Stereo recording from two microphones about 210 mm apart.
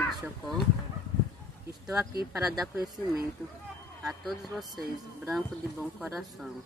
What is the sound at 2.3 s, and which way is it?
Speech, centre (ahead or behind).